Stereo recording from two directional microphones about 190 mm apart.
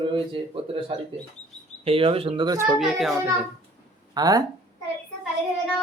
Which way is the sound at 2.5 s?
10° right (ahead or behind).